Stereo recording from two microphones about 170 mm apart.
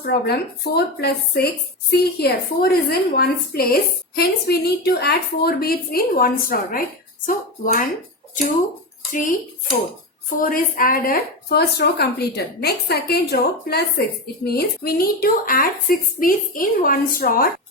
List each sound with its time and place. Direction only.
0.0 s a woman's voice: 70° left (ahead or behind); by 7.9 s 55° left (ahead or behind)
10.4 s a woman's voice: 55° left (ahead or behind)